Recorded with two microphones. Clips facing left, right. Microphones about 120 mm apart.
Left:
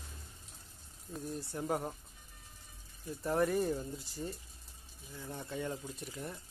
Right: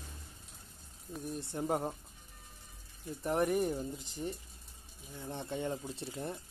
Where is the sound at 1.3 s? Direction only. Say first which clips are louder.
Right 2 dB; 25° right (ahead or behind).